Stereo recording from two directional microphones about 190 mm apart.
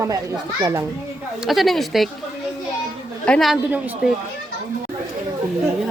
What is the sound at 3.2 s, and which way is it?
Speech, 5° left (ahead or behind).